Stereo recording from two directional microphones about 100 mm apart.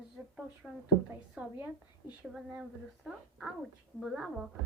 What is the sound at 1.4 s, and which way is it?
Speech, 20° right (ahead or behind).